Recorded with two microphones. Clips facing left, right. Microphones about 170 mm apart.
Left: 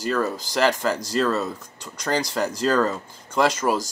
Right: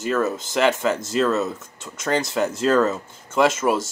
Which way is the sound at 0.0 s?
5° right (ahead or behind).